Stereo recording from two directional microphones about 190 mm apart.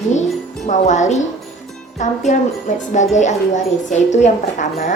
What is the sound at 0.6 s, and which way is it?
A woman's voice, 40° left (ahead or behind).